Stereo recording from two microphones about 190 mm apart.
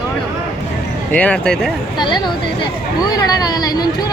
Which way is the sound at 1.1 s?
5° left (ahead or behind).